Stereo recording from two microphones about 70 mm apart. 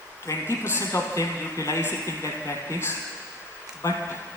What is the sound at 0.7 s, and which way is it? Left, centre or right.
A man's voice, left.